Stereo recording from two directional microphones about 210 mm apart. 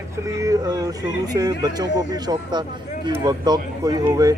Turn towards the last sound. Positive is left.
turn(degrees=-20)  # may be behind; listen again after turning